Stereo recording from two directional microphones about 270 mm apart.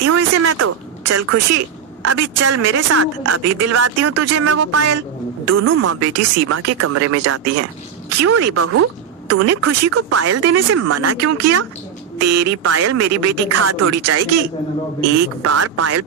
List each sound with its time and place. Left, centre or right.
0.0 s speech: right
15.4 s speech: right